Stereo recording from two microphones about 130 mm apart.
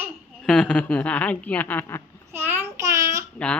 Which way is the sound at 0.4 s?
5° left (ahead or behind).